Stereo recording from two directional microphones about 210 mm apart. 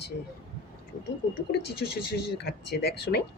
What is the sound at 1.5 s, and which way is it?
Speech, 55° left (ahead or behind).